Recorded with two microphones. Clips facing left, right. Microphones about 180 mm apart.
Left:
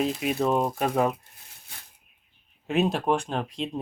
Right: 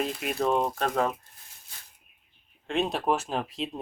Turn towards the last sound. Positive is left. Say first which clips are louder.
# left 1 dB
turn(degrees=0)  # may be behind; listen again after turning